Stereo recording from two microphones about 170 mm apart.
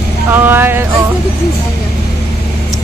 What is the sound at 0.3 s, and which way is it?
Speech, 10° right (ahead or behind).